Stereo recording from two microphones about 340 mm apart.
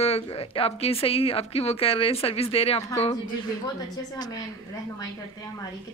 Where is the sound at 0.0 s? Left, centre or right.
Centre.